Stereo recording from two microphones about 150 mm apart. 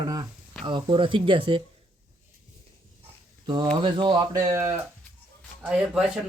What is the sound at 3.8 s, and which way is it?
Speech, 35° right (ahead or behind).